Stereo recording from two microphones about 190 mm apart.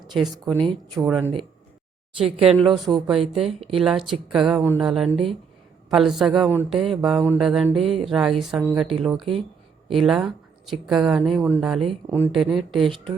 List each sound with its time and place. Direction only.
0.1 s speech: centre (ahead or behind)
0.4 s speech: 25° right (ahead or behind)
1.0 s speech: 10° right (ahead or behind)
2.1 s speech: 30° right (ahead or behind)
3.7 s speech: centre (ahead or behind)
9.1 s speech: 30° right (ahead or behind)
9.9 s speech: centre (ahead or behind)